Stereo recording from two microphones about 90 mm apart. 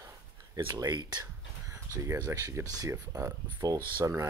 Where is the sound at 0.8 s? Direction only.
50° right (ahead or behind).